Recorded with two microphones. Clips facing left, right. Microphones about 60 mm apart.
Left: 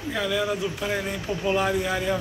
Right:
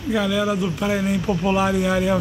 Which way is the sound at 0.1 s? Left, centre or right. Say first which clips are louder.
Right 5 dB; centre.